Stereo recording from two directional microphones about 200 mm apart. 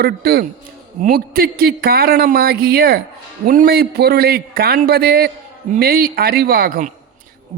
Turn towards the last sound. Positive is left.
turn(degrees=-40)  # may be behind; listen again after turning